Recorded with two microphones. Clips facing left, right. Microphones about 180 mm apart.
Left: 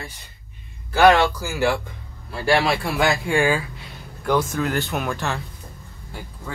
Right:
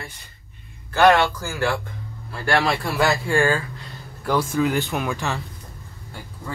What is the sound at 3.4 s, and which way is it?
Speech, 15° left (ahead or behind).